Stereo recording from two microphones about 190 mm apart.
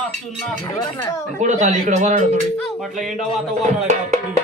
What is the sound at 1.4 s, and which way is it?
Speech, 40° right (ahead or behind).